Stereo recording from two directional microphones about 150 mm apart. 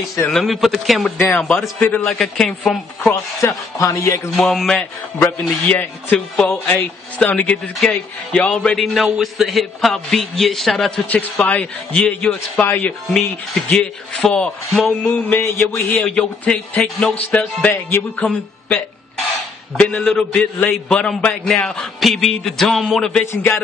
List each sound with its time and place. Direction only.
0.3 s speech: centre (ahead or behind)
3.3 s speech: 20° left (ahead or behind)
4.3 s speech: centre (ahead or behind)
19.8 s speech: 5° left (ahead or behind)
23.2 s speech: 15° left (ahead or behind)